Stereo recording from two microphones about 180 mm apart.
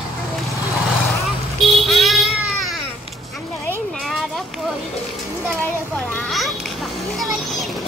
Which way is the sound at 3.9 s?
Centre (ahead or behind).